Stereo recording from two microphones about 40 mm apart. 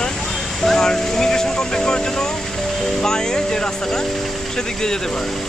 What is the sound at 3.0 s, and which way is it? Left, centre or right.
Speech, centre.